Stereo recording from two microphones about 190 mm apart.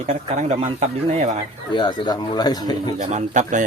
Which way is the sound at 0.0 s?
35° right (ahead or behind).